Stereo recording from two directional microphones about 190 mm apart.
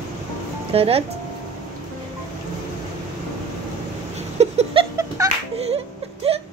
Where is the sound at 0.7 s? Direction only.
30° right (ahead or behind).